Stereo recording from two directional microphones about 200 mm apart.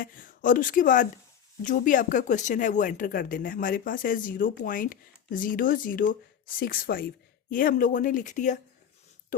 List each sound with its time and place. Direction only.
0.0 s speech: 45° left (ahead or behind)